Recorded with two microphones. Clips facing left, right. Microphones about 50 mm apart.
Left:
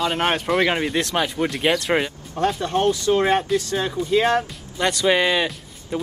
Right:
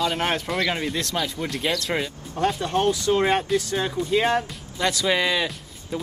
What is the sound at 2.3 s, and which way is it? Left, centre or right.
Speech, centre.